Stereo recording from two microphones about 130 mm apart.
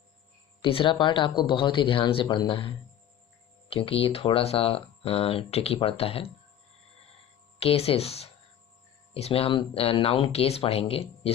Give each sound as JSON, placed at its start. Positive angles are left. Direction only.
{"t": 0.6, "sound": "speech", "side_deg": 40}
{"t": 7.6, "sound": "speech", "side_deg": 50}